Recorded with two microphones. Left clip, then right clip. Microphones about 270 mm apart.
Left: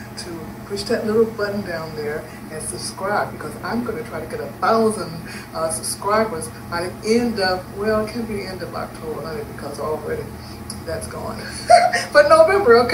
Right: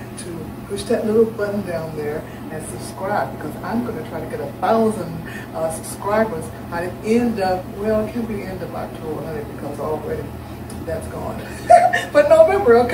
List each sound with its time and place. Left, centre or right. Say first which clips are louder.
0.8 s speech: right 2 dB; centre
3.1 s speech: even; centre
6.1 s speech: even; centre
11.6 s speech: right 1 dB; centre